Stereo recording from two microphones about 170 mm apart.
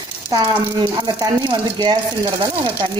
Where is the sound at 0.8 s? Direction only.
25° right (ahead or behind).